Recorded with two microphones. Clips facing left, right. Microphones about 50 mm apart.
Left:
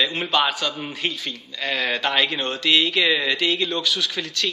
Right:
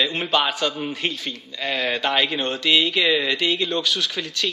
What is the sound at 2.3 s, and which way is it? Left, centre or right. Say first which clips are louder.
Speech: right 1 dB; right.